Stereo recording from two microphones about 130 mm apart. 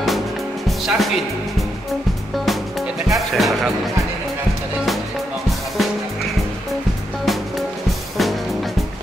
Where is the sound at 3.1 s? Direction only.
Centre (ahead or behind).